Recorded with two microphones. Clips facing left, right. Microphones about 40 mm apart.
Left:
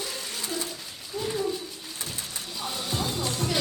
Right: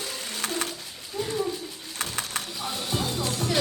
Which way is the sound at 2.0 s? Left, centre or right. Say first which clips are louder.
Right 7 dB; right.